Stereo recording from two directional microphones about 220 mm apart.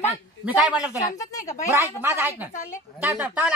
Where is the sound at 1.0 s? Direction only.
15° left (ahead or behind).